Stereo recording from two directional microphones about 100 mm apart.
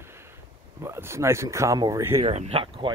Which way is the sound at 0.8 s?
25° right (ahead or behind).